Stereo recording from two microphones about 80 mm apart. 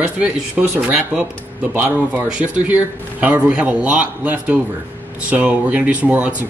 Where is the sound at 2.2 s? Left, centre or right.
Centre.